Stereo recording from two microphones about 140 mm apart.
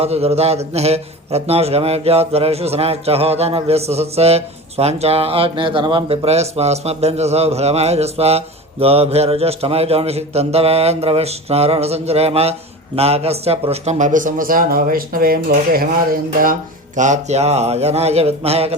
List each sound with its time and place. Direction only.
0.0 s a man's voice: 45° right (ahead or behind)
6.2 s a man's voice: 50° right (ahead or behind)